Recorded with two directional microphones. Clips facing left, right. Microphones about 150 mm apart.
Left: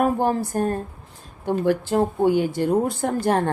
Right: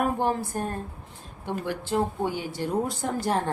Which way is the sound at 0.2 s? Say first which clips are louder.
Left 5 dB; 40° left (ahead or behind).